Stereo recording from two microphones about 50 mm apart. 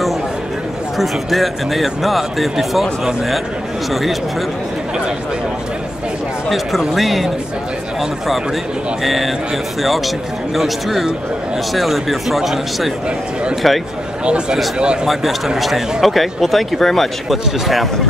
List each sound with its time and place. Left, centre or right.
0.9 s speech: centre
3.9 s speech: centre
6.8 s speech: centre
9.0 s speech: centre
14.2 s speech: right
15.0 s speech: centre